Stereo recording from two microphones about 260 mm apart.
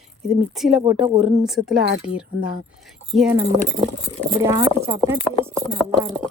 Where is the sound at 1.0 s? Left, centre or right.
Centre.